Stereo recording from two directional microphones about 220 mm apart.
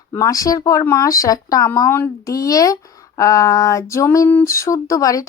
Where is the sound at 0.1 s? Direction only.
15° left (ahead or behind).